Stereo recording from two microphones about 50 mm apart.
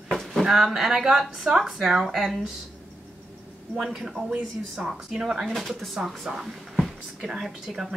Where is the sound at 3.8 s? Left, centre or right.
Centre.